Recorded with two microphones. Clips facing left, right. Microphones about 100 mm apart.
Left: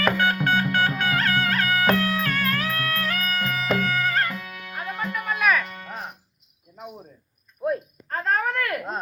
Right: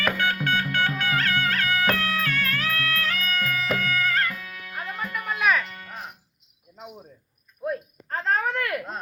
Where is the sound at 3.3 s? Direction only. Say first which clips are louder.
Left 3 dB; 25° left (ahead or behind).